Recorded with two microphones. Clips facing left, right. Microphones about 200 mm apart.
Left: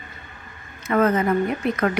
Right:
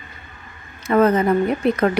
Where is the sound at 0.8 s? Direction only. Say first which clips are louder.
Right 4 dB; 30° right (ahead or behind).